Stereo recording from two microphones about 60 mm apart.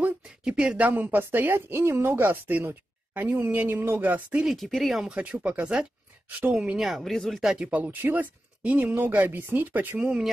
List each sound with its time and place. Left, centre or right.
0.2 s a sound: centre
0.7 s speech: right
2.1 s speech: right
4.6 s speech: centre
5.0 s speech: right
6.8 s speech: centre
7.5 s speech: centre
7.8 s speech: right
9.9 s speech: centre